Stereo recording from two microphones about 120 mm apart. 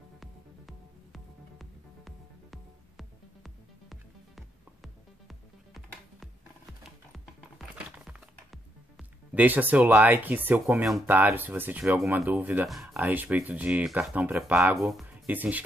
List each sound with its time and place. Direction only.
0.2 s music: centre (ahead or behind)
9.3 s speech: 15° right (ahead or behind)
14.8 s speech: centre (ahead or behind)
15.0 s speech: 10° right (ahead or behind)